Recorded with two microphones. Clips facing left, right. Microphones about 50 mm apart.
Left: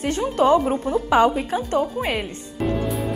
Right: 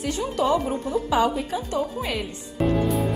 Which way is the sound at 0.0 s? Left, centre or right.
Left.